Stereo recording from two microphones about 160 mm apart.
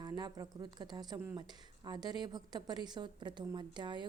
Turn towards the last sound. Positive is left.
turn(degrees=-30)  # may be behind; listen again after turning